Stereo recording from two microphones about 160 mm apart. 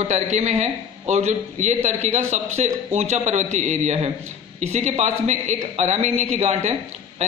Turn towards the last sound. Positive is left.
turn(degrees=-40)  # may be behind; listen again after turning